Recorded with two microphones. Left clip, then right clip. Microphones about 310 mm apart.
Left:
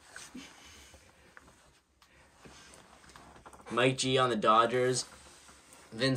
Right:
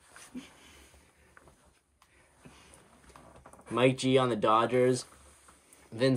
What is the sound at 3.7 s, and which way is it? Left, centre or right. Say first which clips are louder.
Speech: right 2 dB; right.